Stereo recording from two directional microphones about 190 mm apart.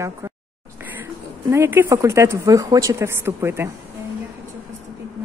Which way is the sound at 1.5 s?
10° right (ahead or behind).